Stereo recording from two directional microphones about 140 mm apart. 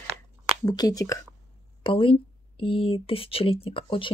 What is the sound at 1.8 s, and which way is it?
Speech, 40° left (ahead or behind).